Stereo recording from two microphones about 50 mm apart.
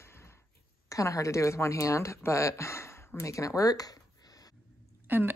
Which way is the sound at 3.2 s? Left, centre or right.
Left.